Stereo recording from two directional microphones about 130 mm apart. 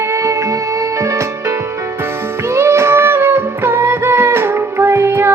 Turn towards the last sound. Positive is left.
turn(degrees=-20)  # may be behind; listen again after turning